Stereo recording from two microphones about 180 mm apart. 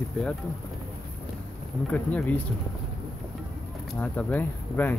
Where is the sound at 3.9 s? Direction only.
5° left (ahead or behind).